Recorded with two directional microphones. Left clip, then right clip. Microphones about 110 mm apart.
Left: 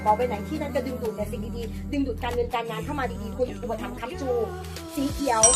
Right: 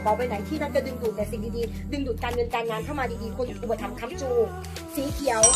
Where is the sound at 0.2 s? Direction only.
25° right (ahead or behind).